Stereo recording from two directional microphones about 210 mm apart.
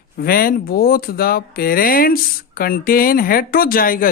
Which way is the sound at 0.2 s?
45° left (ahead or behind).